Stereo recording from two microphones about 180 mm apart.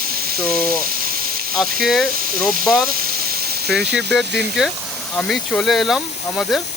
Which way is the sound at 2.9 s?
55° right (ahead or behind).